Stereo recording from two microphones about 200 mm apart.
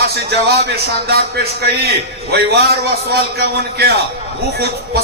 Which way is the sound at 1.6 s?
55° right (ahead or behind).